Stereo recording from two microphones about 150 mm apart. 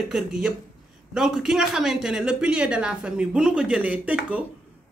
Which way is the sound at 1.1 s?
Centre (ahead or behind).